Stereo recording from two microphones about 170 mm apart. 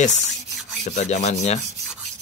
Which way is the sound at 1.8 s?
Centre (ahead or behind).